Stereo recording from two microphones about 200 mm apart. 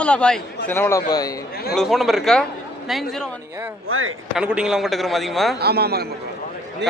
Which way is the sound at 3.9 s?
90° right.